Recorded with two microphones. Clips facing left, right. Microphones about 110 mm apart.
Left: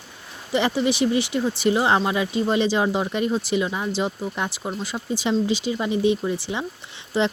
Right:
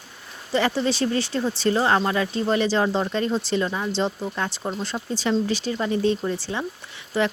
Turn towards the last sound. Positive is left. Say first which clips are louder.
# left 1 dB
turn(degrees=20)  # may be behind; listen again after turning